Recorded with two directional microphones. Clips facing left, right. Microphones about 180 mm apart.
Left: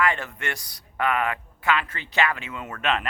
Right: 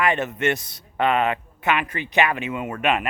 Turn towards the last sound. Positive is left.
turn(degrees=-15)  # may be behind; listen again after turning